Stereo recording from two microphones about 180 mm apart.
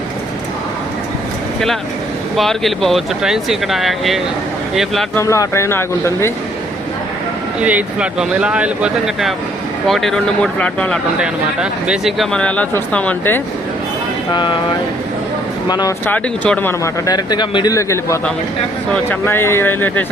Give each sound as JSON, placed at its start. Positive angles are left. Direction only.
{"t": 2.3, "sound": "speech", "side_deg": 0}
{"t": 5.1, "sound": "speech", "side_deg": 15}
{"t": 7.6, "sound": "speech", "side_deg": -10}
{"t": 11.2, "sound": "speech", "side_deg": -5}
{"t": 16.0, "sound": "speech", "side_deg": 10}
{"t": 17.1, "sound": "speech", "side_deg": 25}
{"t": 19.2, "sound": "speech", "side_deg": 15}